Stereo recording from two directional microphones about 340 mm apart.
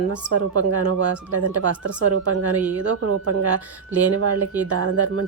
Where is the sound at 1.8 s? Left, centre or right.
Right.